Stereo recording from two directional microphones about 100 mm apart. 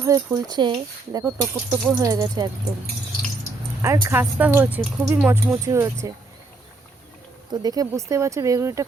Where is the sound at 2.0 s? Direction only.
35° right (ahead or behind).